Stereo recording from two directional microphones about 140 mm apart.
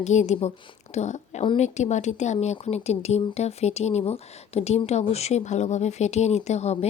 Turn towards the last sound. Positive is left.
turn(degrees=50)  # may be behind; listen again after turning